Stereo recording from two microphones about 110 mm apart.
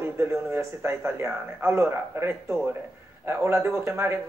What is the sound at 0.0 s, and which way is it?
A man's voice, 20° right (ahead or behind).